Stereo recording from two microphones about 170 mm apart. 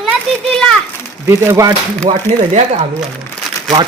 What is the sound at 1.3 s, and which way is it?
Speech, 20° right (ahead or behind).